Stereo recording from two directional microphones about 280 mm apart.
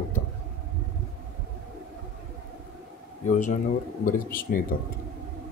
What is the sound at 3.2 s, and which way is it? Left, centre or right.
Speech, left.